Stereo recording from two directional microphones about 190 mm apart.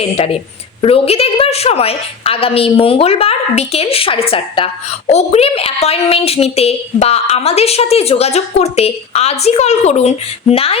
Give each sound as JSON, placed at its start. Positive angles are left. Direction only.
{"t": 0.8, "sound": "a woman's voice", "side_deg": 30}